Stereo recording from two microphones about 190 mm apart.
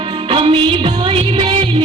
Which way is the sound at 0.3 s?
30° right (ahead or behind).